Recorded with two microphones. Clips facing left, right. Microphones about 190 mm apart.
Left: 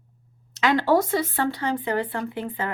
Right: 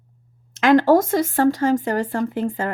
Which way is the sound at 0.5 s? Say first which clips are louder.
Right 6 dB; 50° right (ahead or behind).